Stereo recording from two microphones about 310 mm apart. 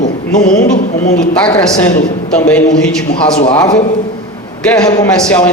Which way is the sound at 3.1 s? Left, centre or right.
Left.